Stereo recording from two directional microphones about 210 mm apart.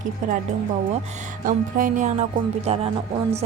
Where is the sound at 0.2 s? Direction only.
35° right (ahead or behind).